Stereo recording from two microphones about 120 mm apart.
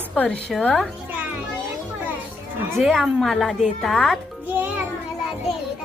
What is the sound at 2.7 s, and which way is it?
A woman's voice, centre (ahead or behind).